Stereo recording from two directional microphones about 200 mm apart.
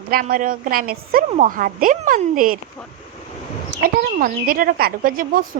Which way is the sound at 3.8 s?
45° right (ahead or behind).